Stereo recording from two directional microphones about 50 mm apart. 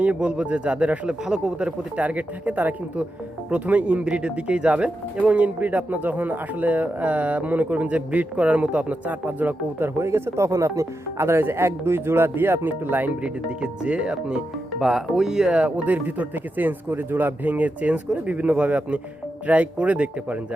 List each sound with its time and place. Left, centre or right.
0.0 s speech: right
10.0 s speech: right
13.2 s speech: right
15.9 s speech: right